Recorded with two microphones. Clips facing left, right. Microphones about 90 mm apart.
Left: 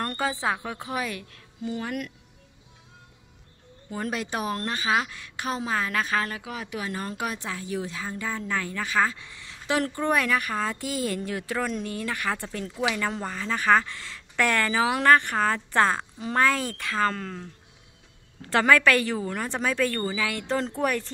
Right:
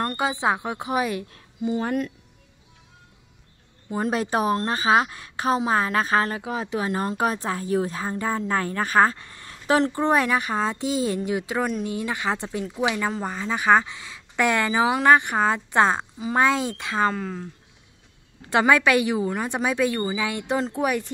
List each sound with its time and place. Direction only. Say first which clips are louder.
0.2 s a woman's voice: right 4 dB; 20° right (ahead or behind)
3.9 s speech: right 6 dB; 30° right (ahead or behind); by 9.8 s 45° right (ahead or behind)
9.8 s a woman's voice: right 4 dB; 25° right (ahead or behind)
16.2 s speech: right 2 dB; 10° right (ahead or behind)
16.4 s a woman's voice: right 3 dB; 20° right (ahead or behind)
17.1 s speech: right 4 dB; 10° right (ahead or behind)